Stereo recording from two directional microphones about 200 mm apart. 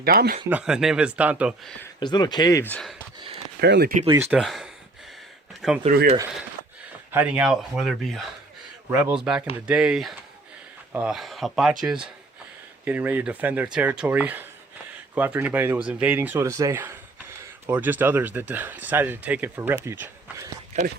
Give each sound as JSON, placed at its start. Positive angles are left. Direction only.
{"t": 0.0, "sound": "speech", "side_deg": -50}
{"t": 0.5, "sound": "speech", "side_deg": -5}
{"t": 2.0, "sound": "speech", "side_deg": 20}
{"t": 3.2, "sound": "a sound", "side_deg": -25}
{"t": 3.6, "sound": "speech", "side_deg": -55}
{"t": 4.0, "sound": "speech", "side_deg": -20}
{"t": 4.3, "sound": "speech", "side_deg": 0}
{"t": 5.8, "sound": "speech", "side_deg": -35}
{"t": 7.1, "sound": "speech", "side_deg": -5}